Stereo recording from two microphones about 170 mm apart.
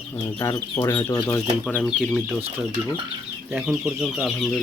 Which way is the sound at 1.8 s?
5° right (ahead or behind).